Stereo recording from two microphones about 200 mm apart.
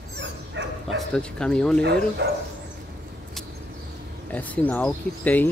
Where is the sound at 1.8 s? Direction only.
55° right (ahead or behind).